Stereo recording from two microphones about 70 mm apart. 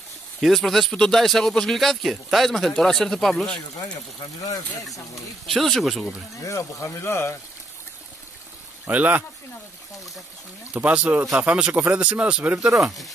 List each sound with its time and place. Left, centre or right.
0.4 s speech: centre
4.2 s speech: left
5.5 s speech: centre
6.4 s speech: left
8.8 s speech: right
10.7 s speech: right; by 13.1 s centre